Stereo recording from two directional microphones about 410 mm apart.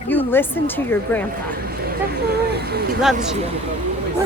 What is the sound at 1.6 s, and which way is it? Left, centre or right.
Speech, right.